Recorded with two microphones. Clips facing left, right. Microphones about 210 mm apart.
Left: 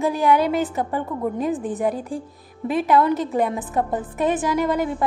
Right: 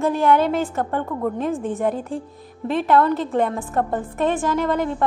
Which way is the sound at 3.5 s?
15° left (ahead or behind).